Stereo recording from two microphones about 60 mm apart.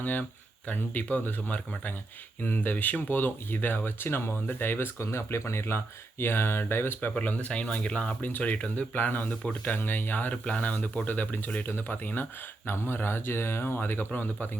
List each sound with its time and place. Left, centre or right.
0.0 s speech: left
4.9 s speech: left
7.2 s speech: left
9.7 s speech: left
12.6 s speech: left